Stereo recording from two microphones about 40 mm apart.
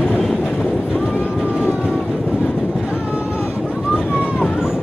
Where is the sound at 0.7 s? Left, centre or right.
Right.